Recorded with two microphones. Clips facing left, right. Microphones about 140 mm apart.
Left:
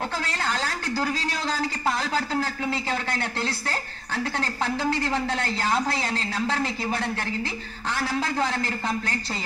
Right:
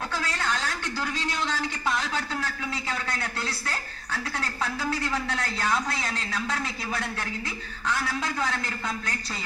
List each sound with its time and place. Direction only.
0.2 s a woman's voice: 30° left (ahead or behind)